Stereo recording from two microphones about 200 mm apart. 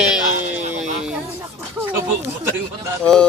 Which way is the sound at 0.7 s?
5° right (ahead or behind).